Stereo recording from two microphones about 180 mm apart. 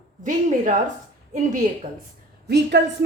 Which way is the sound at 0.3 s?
45° right (ahead or behind).